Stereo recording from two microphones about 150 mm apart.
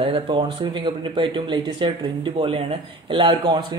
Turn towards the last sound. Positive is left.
turn(degrees=-30)  # may be behind; listen again after turning